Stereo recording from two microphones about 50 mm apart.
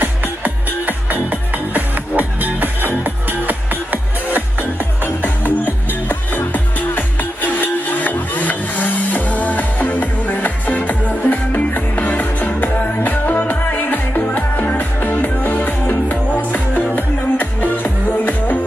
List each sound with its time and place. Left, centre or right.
0.0 s music: right
5.0 s music: left